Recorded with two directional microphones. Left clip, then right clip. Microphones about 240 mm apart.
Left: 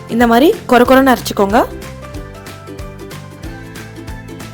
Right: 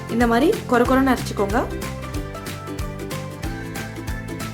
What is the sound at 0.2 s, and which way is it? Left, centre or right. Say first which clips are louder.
Speech: left 8 dB; left.